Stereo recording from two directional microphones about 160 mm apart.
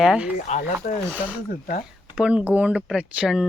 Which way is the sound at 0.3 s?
50° left (ahead or behind).